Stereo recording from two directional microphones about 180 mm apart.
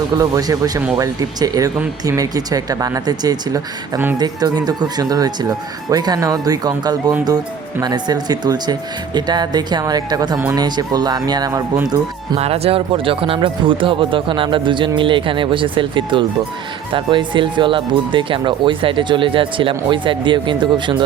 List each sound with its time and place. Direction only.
0.2 s speech: 20° right (ahead or behind)
12.4 s speech: 35° right (ahead or behind)